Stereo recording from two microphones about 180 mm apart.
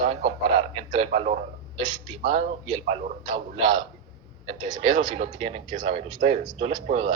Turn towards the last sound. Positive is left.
turn(degrees=-40)  # may be behind; listen again after turning